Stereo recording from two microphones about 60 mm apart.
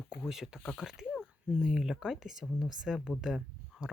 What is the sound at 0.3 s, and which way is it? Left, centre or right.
Speech, centre.